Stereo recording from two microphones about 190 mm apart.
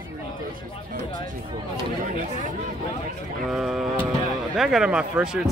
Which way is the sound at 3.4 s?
Centre (ahead or behind).